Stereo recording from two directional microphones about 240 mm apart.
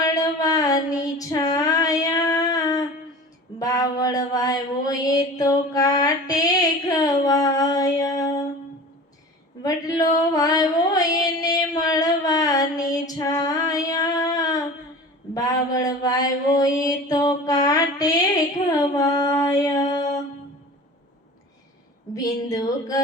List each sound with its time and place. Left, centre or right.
0.0 s female singing: centre
3.6 s mantra: centre
9.6 s a sound: centre
12.9 s female singing: centre
15.4 s mantra: centre
22.1 s speech: centre